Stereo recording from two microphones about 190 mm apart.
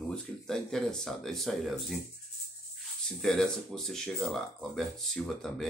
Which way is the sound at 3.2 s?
5° left (ahead or behind).